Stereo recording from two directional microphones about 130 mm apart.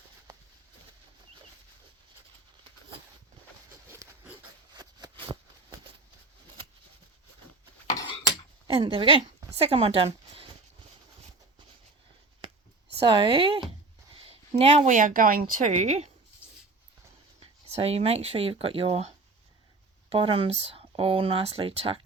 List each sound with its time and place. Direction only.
3.8 s a sound: 20° right (ahead or behind)
4.7 s a sound: 35° right (ahead or behind)
8.6 s speech: 40° right (ahead or behind)
13.1 s speech: 40° right (ahead or behind)
14.5 s speech: 50° right (ahead or behind)
14.8 s speech: 90° right; by 16.1 s 60° right (ahead or behind)
17.4 s speech: 50° right (ahead or behind)